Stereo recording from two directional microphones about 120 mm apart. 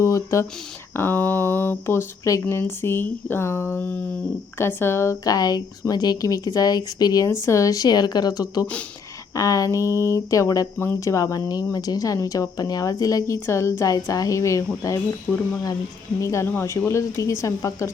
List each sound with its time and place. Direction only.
0.0 s a woman's voice: 25° left (ahead or behind)
16.2 s speech: 25° left (ahead or behind)